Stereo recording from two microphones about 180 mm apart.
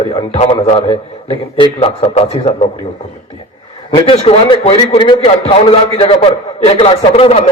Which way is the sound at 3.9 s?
30° left (ahead or behind).